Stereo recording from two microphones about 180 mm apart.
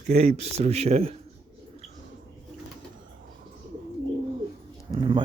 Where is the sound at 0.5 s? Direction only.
35° right (ahead or behind).